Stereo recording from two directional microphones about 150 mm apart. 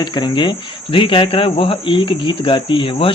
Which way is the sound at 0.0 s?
30° left (ahead or behind).